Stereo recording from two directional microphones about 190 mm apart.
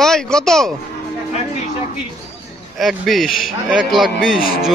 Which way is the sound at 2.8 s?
Centre (ahead or behind).